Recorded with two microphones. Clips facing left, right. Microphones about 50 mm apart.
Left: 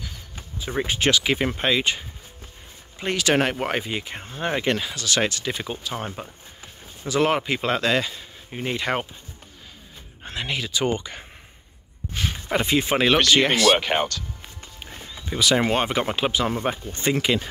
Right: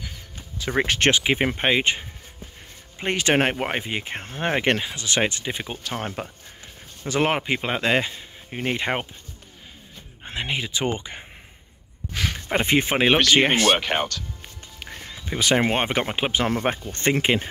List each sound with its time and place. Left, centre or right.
0.7 s speech: right
1.1 s speech: right
4.0 s speech: right
4.7 s speech: right
5.8 s speech: right
7.1 s speech: right
7.4 s speech: centre
10.2 s speech: right
12.6 s speech: right
12.9 s speech: right
13.7 s speech: centre
14.8 s a sound: right
15.2 s speech: right
17.1 s speech: right